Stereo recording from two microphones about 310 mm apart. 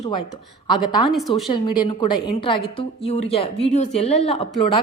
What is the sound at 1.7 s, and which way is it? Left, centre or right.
A woman's voice, centre.